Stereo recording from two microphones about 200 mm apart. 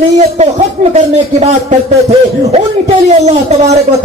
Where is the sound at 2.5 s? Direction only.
30° right (ahead or behind).